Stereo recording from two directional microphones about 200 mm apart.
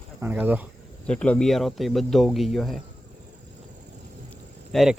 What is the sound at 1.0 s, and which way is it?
Speech, 5° left (ahead or behind).